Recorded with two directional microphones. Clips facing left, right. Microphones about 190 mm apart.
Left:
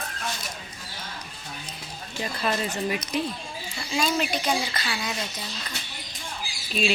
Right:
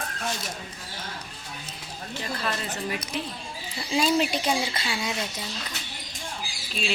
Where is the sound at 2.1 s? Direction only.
15° left (ahead or behind).